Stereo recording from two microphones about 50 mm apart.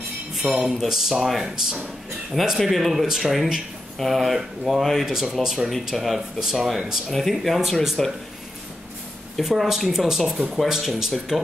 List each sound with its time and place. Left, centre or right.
0.4 s speech: right
0.8 s speech: centre
9.4 s speech: centre